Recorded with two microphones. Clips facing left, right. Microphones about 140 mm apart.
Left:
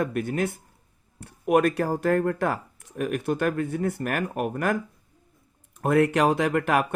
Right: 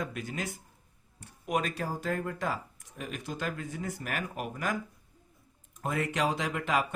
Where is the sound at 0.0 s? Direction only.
55° left (ahead or behind).